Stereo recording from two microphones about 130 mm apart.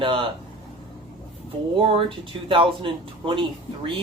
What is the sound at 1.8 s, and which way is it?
Speech, 45° right (ahead or behind).